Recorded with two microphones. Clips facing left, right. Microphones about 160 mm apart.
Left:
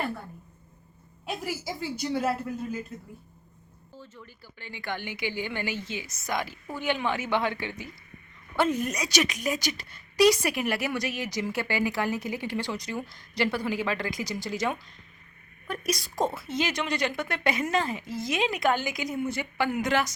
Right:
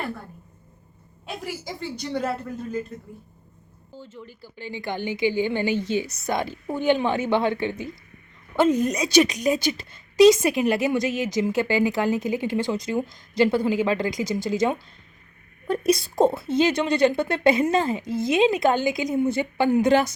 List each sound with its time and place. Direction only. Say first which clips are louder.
1.6 s speech: even; 5° left (ahead or behind)
3.9 s speech: right 6 dB; 25° right (ahead or behind)